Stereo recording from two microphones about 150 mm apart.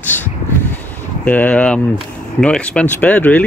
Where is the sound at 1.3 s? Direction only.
10° left (ahead or behind).